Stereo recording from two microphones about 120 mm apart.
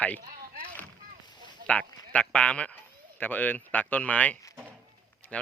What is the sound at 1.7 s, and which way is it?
Speech, 10° left (ahead or behind).